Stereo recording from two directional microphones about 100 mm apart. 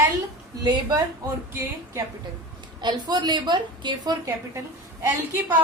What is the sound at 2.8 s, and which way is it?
A woman's voice, 45° right (ahead or behind).